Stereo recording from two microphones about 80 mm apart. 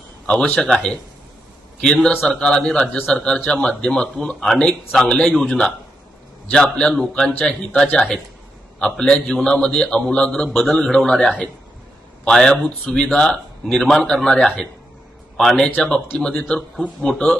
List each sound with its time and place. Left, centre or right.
0.3 s a man's voice: centre